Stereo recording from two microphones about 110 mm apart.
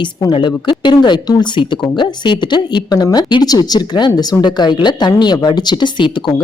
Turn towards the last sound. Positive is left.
turn(degrees=45)  # may be behind; listen again after turning